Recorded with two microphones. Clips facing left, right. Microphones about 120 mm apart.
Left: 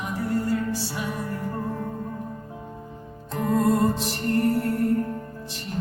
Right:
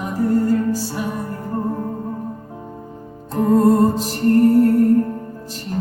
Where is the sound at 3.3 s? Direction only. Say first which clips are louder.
Right 8 dB; 35° right (ahead or behind).